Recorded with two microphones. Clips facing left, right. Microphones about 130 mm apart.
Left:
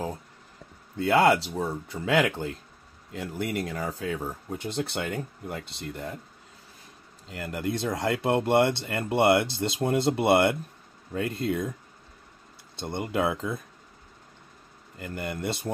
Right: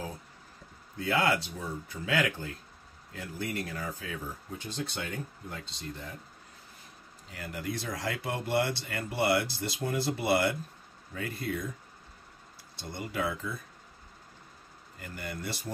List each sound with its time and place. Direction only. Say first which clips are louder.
0.9 s speech: left 7 dB; 75° left (ahead or behind)
7.4 s speech: left 7 dB; 60° left (ahead or behind)
12.8 s speech: left 7 dB; 60° left (ahead or behind)
15.0 s speech: left 7 dB; 55° left (ahead or behind)